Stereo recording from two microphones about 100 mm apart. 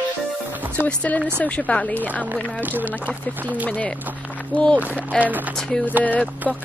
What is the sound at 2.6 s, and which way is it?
Speech, 20° right (ahead or behind).